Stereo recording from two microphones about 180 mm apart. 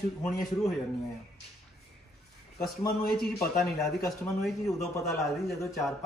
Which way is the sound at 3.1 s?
Centre (ahead or behind).